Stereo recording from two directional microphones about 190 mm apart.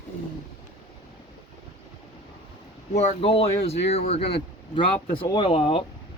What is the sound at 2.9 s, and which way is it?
Speech, 35° left (ahead or behind).